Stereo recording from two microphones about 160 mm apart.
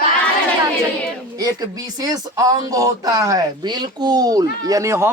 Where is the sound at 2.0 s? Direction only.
20° right (ahead or behind).